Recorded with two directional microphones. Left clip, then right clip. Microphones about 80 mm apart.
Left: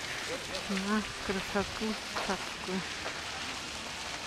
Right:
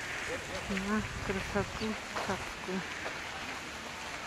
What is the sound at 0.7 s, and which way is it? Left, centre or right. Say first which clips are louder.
Speech: left 2 dB; centre.